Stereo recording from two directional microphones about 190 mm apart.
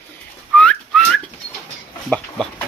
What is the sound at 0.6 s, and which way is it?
Whistling, 5° left (ahead or behind).